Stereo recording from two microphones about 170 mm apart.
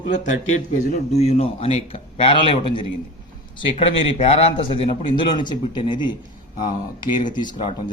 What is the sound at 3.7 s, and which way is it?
Speech, 35° left (ahead or behind).